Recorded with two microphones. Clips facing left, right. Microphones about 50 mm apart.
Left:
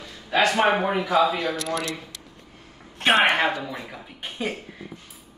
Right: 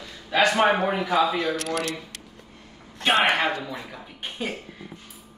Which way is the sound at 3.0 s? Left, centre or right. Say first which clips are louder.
Left 2 dB; left.